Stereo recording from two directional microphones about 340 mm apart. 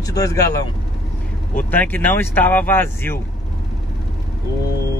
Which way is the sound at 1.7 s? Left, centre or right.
Centre.